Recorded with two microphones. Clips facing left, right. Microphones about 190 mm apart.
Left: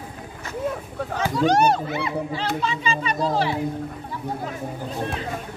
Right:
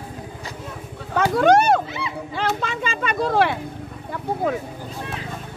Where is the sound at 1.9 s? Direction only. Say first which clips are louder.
Left 4 dB; 55° left (ahead or behind).